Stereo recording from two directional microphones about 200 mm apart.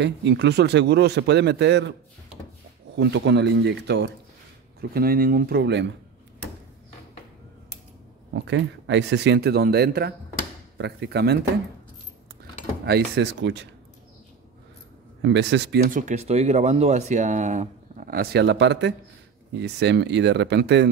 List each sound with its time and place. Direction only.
0.0 s a man's voice: 60° right (ahead or behind)
3.0 s a man's voice: 60° right (ahead or behind)
4.7 s speech: 50° right (ahead or behind)
8.3 s a man's voice: 60° right (ahead or behind)
12.8 s a man's voice: 55° right (ahead or behind)
15.2 s a man's voice: 60° right (ahead or behind)
15.9 s a man's voice: 40° right (ahead or behind); by 20.9 s 60° right (ahead or behind)